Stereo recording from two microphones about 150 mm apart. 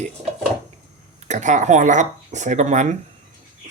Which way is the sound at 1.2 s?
55° right (ahead or behind).